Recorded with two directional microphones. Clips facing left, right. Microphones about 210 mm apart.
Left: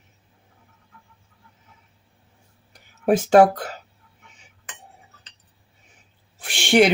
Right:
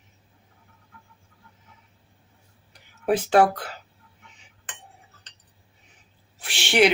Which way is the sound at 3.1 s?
45° left (ahead or behind).